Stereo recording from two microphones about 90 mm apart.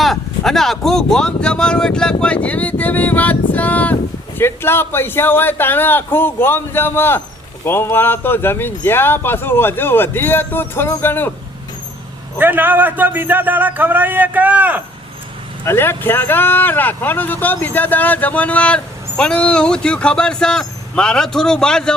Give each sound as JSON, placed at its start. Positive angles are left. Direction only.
{"t": 0.0, "sound": "speech", "side_deg": 5}
{"t": 12.4, "sound": "a man's voice", "side_deg": -20}
{"t": 15.6, "sound": "speech", "side_deg": 25}